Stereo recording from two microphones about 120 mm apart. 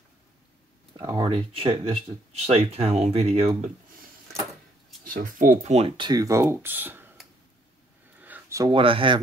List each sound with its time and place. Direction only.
1.1 s speech: 45° right (ahead or behind)
5.4 s speech: 70° right (ahead or behind)
5.9 s speech: 40° right (ahead or behind)
6.2 s speech: 25° right (ahead or behind)
8.2 s a sound: 15° right (ahead or behind)
8.7 s speech: 45° right (ahead or behind)